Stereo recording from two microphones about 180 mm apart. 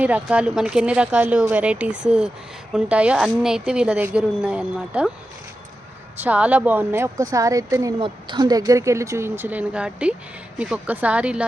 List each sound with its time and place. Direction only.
0.0 s a woman's voice: 5° right (ahead or behind)
6.1 s speech: 10° right (ahead or behind)